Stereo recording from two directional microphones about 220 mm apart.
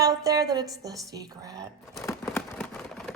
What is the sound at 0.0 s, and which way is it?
A woman's voice, 15° right (ahead or behind).